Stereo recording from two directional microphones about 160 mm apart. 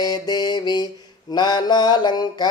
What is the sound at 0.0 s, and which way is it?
Music, 25° left (ahead or behind).